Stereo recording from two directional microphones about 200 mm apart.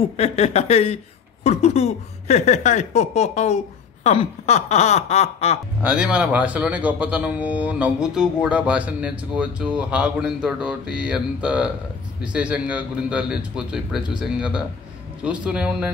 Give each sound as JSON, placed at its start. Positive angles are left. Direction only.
{"t": 0.0, "sound": "speech", "side_deg": 30}
{"t": 5.8, "sound": "speech", "side_deg": -5}